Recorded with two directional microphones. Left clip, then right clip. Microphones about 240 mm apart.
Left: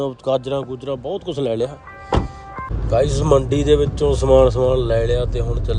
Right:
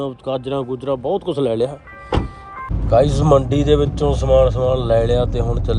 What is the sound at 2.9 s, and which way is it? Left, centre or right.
Speech, centre.